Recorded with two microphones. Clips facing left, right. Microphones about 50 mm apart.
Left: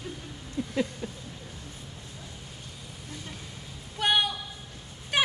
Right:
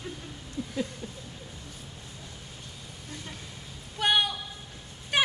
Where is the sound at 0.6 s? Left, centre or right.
Left.